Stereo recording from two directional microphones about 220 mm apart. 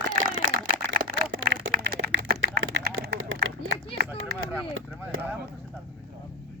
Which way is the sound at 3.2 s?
65° right (ahead or behind).